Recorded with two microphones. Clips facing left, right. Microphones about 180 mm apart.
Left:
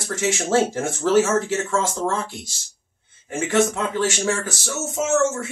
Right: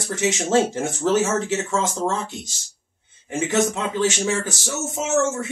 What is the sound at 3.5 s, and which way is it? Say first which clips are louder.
Speech: left 2 dB; 20° right (ahead or behind).